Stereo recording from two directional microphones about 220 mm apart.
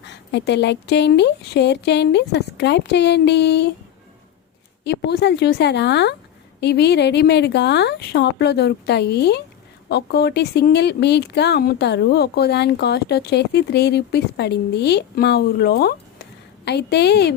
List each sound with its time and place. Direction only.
0.0 s speech: 50° left (ahead or behind)
4.8 s speech: 50° left (ahead or behind)